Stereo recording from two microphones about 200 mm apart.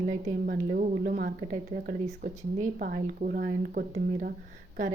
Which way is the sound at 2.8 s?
50° right (ahead or behind).